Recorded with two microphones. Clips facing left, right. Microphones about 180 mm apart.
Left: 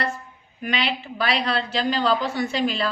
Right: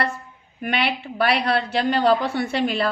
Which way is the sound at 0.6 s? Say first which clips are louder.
Right 2 dB; 60° right (ahead or behind).